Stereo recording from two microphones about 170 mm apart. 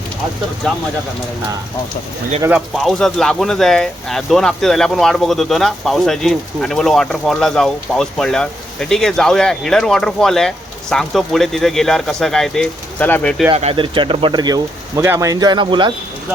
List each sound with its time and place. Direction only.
2.5 s speech: centre (ahead or behind)
13.5 s speech: 35° right (ahead or behind)